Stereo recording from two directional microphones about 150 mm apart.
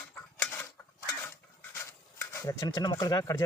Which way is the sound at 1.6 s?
15° left (ahead or behind).